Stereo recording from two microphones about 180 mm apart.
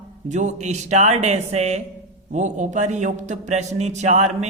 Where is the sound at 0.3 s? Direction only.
40° right (ahead or behind).